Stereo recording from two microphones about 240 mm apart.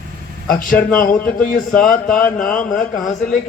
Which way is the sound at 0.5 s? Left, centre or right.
Left.